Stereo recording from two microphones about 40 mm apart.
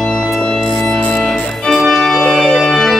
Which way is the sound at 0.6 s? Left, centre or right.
Centre.